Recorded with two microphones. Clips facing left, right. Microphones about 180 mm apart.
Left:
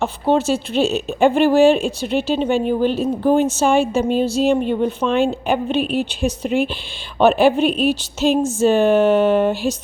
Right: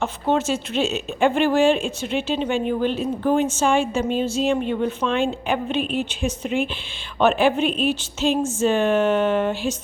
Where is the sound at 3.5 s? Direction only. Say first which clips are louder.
Left 4 dB; 35° left (ahead or behind).